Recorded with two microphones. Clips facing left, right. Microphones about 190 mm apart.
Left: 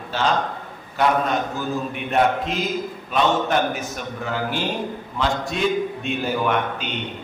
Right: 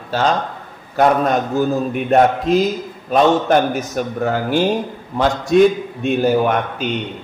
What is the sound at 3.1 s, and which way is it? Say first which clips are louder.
A man's voice: right 7 dB; 40° right (ahead or behind).